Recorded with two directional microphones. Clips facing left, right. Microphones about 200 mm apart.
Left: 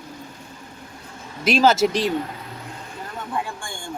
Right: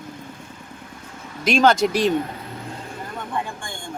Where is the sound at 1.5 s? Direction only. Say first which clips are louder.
Even; 5° left (ahead or behind).